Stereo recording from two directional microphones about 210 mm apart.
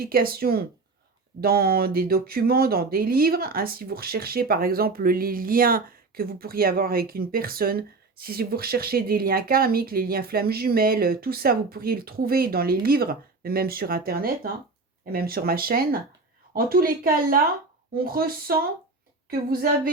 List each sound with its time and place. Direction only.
0.0 s speech: 45° right (ahead or behind)